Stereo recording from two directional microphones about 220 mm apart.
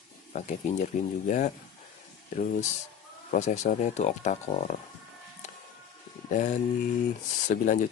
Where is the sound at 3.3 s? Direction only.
30° left (ahead or behind).